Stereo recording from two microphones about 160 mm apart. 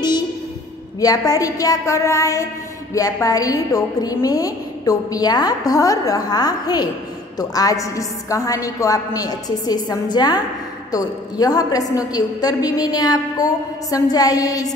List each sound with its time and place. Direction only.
1.0 s a woman's voice: 25° left (ahead or behind)